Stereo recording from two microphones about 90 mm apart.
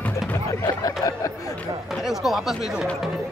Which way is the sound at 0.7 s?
40° left (ahead or behind).